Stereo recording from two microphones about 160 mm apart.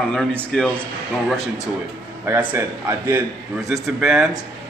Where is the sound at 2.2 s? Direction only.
10° right (ahead or behind).